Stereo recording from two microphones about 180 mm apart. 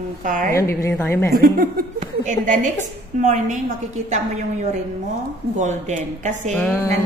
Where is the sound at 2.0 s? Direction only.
45° right (ahead or behind).